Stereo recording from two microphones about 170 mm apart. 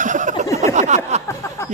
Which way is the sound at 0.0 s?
50° right (ahead or behind).